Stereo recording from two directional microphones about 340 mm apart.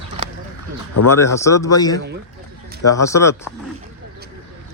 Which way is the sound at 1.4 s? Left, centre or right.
Centre.